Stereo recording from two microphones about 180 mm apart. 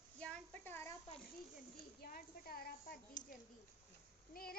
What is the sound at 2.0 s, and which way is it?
Speech, 55° left (ahead or behind).